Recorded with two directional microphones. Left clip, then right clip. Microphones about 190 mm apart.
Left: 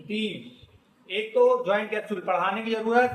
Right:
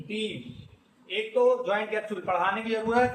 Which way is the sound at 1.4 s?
45° left (ahead or behind).